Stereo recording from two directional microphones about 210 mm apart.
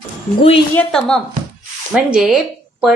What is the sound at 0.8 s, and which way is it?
Speech, 5° left (ahead or behind).